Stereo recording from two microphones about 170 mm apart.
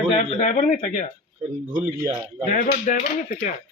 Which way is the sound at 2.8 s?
50° left (ahead or behind).